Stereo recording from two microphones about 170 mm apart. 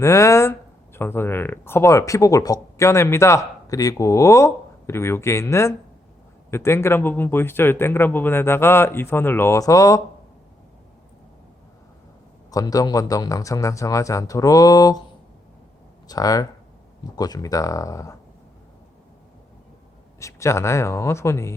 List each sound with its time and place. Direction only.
0.0 s speech: 15° left (ahead or behind)
12.5 s a man's voice: 20° left (ahead or behind)
16.0 s a man's voice: 20° left (ahead or behind)
20.1 s speech: 15° left (ahead or behind)